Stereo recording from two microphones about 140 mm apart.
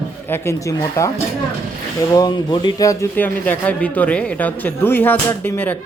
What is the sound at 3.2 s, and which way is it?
A man's voice, 10° left (ahead or behind).